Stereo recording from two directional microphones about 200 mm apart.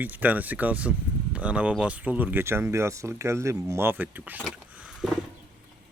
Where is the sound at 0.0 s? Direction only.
10° right (ahead or behind).